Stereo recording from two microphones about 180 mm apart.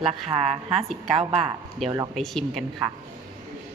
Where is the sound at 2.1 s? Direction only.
Centre (ahead or behind).